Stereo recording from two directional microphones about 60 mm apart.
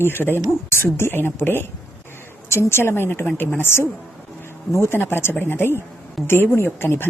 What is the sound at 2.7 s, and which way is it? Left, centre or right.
A woman's voice, left.